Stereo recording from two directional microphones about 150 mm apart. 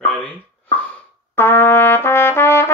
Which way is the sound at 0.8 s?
15° left (ahead or behind).